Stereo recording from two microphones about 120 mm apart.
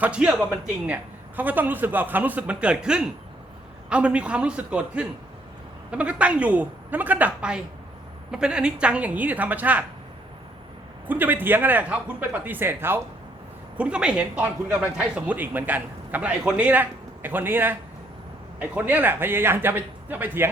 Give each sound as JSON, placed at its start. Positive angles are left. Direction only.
{"t": 0.0, "sound": "speech", "side_deg": -10}
{"t": 11.0, "sound": "speech", "side_deg": -15}